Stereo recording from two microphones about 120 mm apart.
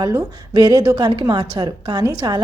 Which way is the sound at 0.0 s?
35° right (ahead or behind).